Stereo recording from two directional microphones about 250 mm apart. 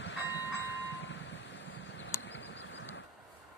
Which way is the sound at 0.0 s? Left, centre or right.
Left.